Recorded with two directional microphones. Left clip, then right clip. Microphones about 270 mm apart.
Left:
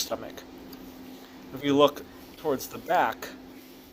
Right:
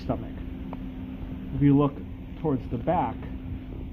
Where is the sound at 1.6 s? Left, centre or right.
Left.